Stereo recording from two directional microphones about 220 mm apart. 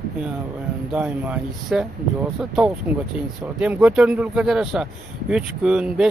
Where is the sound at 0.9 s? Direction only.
5° right (ahead or behind).